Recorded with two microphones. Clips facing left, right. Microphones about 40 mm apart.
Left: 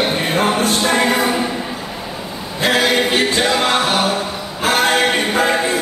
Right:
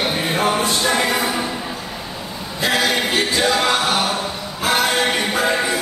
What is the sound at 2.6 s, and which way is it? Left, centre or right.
Music, left.